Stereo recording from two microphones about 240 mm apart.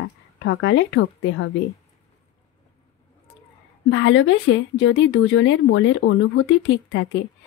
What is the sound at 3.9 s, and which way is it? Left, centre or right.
A woman's voice, left.